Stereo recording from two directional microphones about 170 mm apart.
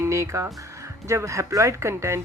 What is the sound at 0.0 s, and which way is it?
Speech, 15° right (ahead or behind).